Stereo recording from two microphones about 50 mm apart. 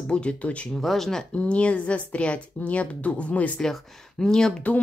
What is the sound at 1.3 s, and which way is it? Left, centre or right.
Speech, left.